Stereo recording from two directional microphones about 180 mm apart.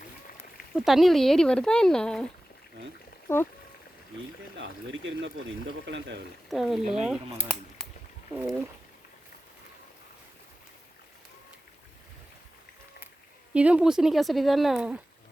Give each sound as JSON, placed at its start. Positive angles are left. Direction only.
{"t": 0.7, "sound": "speech", "side_deg": 0}
{"t": 4.5, "sound": "speech", "side_deg": -90}
{"t": 6.5, "sound": "speech", "side_deg": 0}
{"t": 7.8, "sound": "a sound", "side_deg": 0}
{"t": 13.5, "sound": "speech", "side_deg": -5}